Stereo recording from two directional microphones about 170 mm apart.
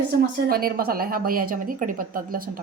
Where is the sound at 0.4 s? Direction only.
60° right (ahead or behind).